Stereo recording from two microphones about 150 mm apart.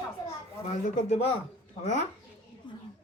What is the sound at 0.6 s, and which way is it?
Speech, 55° left (ahead or behind).